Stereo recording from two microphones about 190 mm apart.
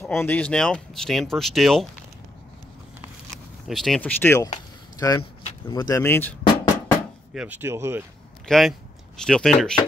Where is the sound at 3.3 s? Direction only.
Centre (ahead or behind).